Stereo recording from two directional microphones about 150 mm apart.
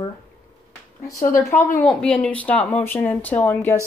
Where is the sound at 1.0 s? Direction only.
20° left (ahead or behind).